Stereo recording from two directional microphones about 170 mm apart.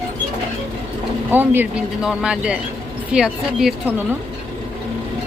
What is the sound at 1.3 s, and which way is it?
A woman's voice, 10° right (ahead or behind).